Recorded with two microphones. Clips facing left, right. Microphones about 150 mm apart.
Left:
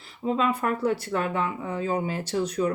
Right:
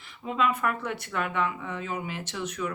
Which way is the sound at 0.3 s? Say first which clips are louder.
Left 2 dB; 30° left (ahead or behind).